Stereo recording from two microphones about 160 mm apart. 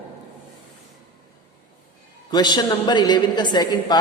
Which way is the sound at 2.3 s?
25° left (ahead or behind).